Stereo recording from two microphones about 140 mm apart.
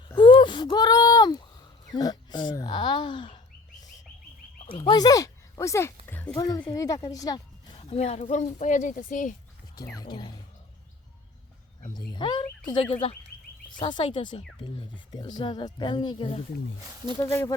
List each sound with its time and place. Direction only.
0.2 s a sound: 35° left (ahead or behind)
4.8 s speech: 30° left (ahead or behind)
6.1 s a sound: 15° left (ahead or behind)
6.4 s a woman's voice: 25° left (ahead or behind)
7.8 s speech: 45° left (ahead or behind); by 9.3 s 70° left (ahead or behind)
9.7 s speech: 25° left (ahead or behind)
11.9 s speech: 35° left (ahead or behind)
17.2 s speech: 20° left (ahead or behind)